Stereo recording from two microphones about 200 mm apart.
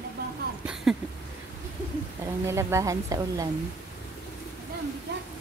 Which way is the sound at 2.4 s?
15° right (ahead or behind).